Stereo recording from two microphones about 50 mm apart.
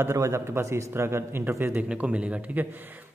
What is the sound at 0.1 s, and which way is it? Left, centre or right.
A man's voice, right.